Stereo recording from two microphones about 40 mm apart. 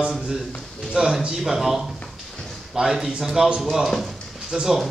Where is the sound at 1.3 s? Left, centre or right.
Centre.